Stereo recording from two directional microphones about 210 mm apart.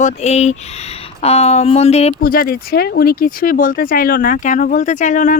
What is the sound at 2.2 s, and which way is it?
Speech, 45° left (ahead or behind).